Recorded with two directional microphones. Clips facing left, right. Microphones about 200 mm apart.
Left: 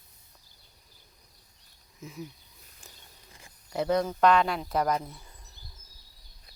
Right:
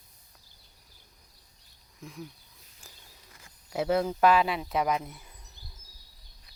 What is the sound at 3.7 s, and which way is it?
Speech, 5° right (ahead or behind).